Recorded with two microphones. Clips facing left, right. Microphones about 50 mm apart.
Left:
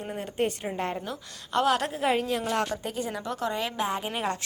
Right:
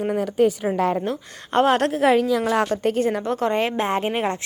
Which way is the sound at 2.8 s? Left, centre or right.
Right.